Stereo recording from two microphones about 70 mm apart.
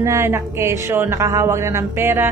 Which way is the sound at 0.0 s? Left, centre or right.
Right.